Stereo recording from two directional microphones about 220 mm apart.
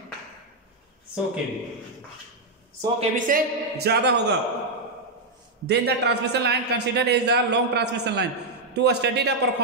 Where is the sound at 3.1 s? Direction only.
35° right (ahead or behind).